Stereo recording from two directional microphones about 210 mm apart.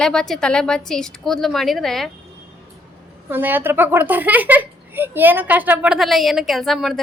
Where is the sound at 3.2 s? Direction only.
10° right (ahead or behind).